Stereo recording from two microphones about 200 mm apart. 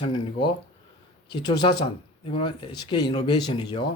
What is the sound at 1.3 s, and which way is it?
Speech, 20° left (ahead or behind).